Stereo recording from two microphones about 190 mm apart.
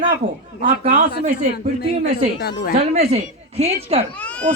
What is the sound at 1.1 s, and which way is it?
Speech, 55° left (ahead or behind).